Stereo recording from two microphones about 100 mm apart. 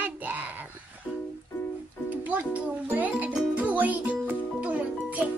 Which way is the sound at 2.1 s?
15° right (ahead or behind).